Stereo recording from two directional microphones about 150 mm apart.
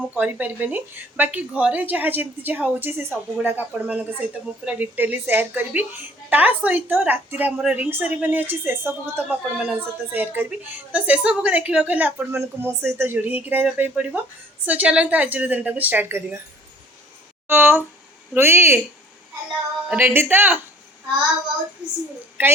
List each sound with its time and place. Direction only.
0.1 s speech: 10° right (ahead or behind)
17.5 s speech: 15° right (ahead or behind)
19.9 s speech: 10° right (ahead or behind)
22.4 s speech: 15° right (ahead or behind)